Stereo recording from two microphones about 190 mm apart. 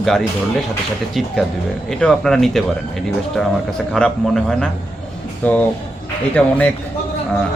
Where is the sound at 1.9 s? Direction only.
5° left (ahead or behind).